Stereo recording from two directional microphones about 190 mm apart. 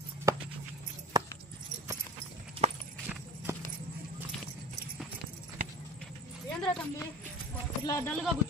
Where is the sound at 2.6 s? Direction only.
30° right (ahead or behind).